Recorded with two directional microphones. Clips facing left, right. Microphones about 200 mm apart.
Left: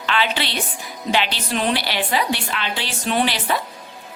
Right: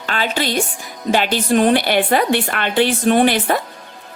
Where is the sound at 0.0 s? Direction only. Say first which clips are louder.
Right 2 dB; 45° right (ahead or behind).